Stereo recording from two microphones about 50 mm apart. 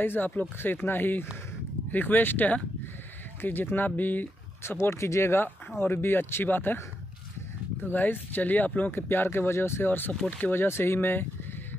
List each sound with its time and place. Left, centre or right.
0.0 s speech: left
3.3 s speech: left
4.7 s speech: left
5.8 s speech: left
7.8 s speech: left
8.9 s speech: left